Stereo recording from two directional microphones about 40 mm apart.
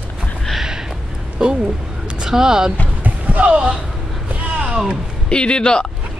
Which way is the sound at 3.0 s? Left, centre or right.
Right.